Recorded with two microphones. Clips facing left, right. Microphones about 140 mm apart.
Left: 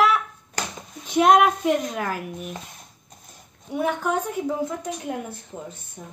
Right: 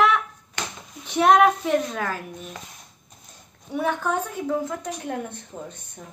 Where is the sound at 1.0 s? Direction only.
15° left (ahead or behind).